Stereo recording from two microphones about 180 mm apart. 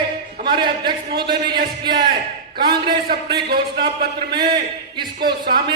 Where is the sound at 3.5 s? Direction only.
60° right (ahead or behind).